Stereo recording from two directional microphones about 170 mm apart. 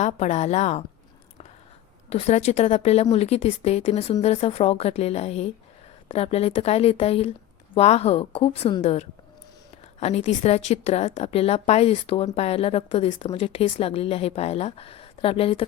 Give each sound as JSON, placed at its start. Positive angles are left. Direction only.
{"t": 0.0, "sound": "a woman's voice", "side_deg": 40}
{"t": 2.0, "sound": "a woman's voice", "side_deg": 40}